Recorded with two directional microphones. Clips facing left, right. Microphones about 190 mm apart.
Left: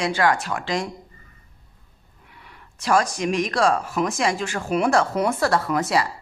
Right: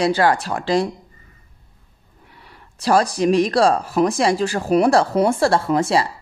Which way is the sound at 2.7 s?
35° right (ahead or behind).